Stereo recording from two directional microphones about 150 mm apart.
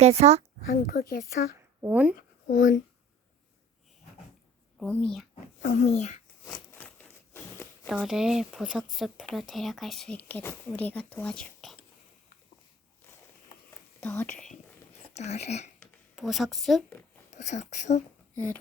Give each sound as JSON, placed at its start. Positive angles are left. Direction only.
{"t": 0.0, "sound": "speech", "side_deg": -45}
{"t": 0.7, "sound": "speech", "side_deg": 75}
{"t": 1.8, "sound": "speech", "side_deg": -10}
{"t": 2.5, "sound": "speech", "side_deg": 60}
{"t": 4.8, "sound": "speech", "side_deg": 10}
{"t": 5.6, "sound": "speech", "side_deg": 55}
{"t": 6.7, "sound": "a sound", "side_deg": 10}
{"t": 7.9, "sound": "speech", "side_deg": -5}
{"t": 14.0, "sound": "speech", "side_deg": 5}
{"t": 15.1, "sound": "speech", "side_deg": 45}
{"t": 16.1, "sound": "speech", "side_deg": 0}
{"t": 17.3, "sound": "speech", "side_deg": 50}